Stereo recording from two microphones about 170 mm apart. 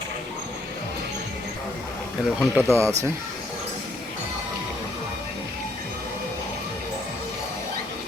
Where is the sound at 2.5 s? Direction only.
15° right (ahead or behind).